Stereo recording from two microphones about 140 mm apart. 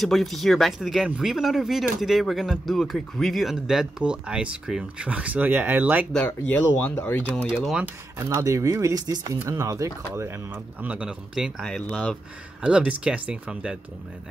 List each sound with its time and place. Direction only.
0.0 s speech: centre (ahead or behind)
6.1 s speech: 10° left (ahead or behind)
7.4 s speech: 5° right (ahead or behind)
8.2 s speech: 20° right (ahead or behind)